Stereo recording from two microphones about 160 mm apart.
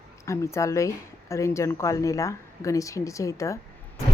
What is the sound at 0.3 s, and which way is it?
Speech, 20° left (ahead or behind).